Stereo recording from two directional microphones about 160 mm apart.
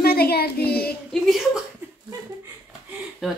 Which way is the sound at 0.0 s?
75° left (ahead or behind).